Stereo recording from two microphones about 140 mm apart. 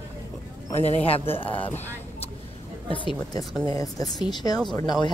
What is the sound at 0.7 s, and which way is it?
Speech, 50° left (ahead or behind).